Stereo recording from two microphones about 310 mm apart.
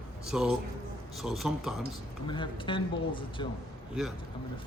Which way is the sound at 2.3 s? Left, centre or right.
Centre.